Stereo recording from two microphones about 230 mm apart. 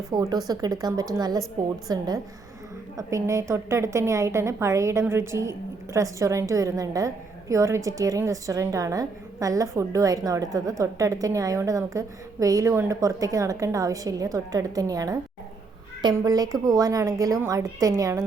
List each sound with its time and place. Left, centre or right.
0.1 s a woman's voice: centre
3.1 s a woman's voice: centre